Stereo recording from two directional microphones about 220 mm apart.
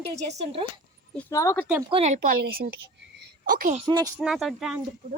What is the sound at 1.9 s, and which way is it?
A woman's voice, 30° right (ahead or behind).